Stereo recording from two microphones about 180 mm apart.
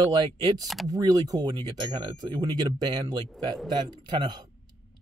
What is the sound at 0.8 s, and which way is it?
Speech, 20° right (ahead or behind).